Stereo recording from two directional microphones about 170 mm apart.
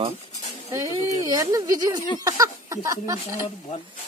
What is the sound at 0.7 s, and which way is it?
Speech, 20° right (ahead or behind).